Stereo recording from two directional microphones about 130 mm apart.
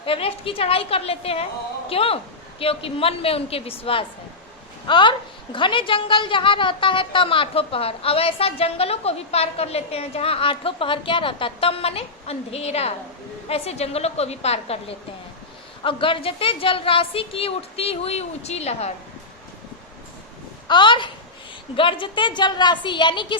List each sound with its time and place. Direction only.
0.0 s a woman's voice: 45° left (ahead or behind)
20.7 s a woman's voice: 35° left (ahead or behind)